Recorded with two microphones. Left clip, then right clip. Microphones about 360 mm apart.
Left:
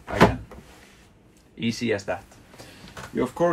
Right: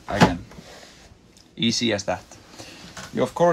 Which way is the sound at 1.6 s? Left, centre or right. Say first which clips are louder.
Right 4 dB; centre.